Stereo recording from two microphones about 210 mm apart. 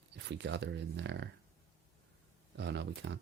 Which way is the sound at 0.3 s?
55° right (ahead or behind).